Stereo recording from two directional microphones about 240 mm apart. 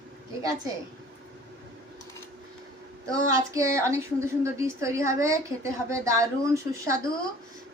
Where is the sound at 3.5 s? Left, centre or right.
Centre.